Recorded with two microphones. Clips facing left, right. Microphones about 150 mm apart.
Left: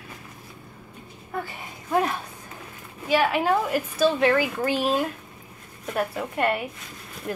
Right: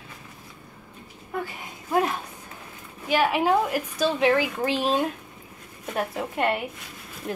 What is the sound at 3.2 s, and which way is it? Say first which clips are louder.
A woman's voice: right 1 dB; 15° right (ahead or behind).